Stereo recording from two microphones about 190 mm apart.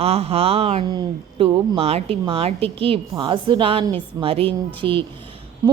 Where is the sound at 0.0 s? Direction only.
30° right (ahead or behind).